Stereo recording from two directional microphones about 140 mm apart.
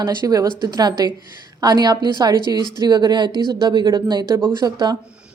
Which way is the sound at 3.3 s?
30° left (ahead or behind).